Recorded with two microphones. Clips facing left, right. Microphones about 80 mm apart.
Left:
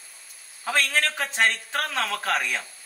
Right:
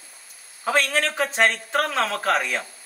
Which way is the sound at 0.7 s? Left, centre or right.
Centre.